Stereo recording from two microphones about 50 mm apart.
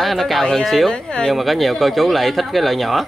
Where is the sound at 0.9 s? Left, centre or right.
Centre.